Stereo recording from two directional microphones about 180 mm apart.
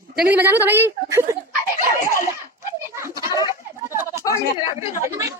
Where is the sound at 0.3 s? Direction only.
10° right (ahead or behind).